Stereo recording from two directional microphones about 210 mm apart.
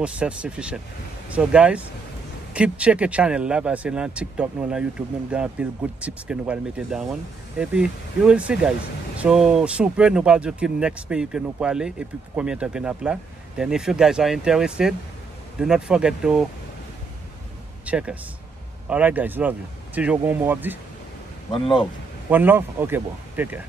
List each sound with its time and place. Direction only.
0.0 s speech: 5° right (ahead or behind)
17.8 s speech: 5° right (ahead or behind)
21.5 s speech: 25° left (ahead or behind)
22.3 s speech: 10° right (ahead or behind)